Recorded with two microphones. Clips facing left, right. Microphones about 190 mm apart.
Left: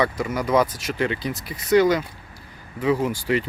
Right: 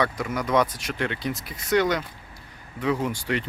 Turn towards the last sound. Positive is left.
turn(degrees=5)  # may be behind; listen again after turning